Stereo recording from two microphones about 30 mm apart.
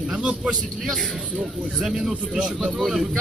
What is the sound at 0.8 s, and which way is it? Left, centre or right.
Speech, centre.